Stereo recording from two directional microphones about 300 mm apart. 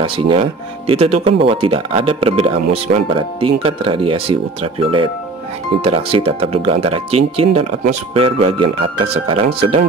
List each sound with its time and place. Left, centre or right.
0.0 s speech: centre
5.9 s speech: centre